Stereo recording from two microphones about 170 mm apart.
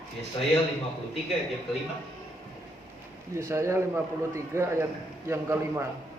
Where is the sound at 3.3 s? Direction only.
15° right (ahead or behind).